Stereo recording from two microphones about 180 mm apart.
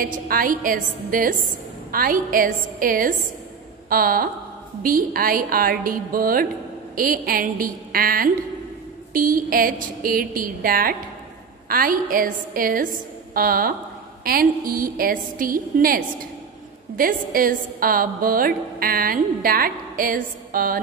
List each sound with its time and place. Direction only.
0.0 s a woman's voice: 50° right (ahead or behind)